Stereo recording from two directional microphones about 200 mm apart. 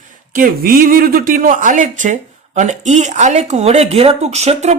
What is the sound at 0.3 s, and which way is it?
Speech, 45° right (ahead or behind).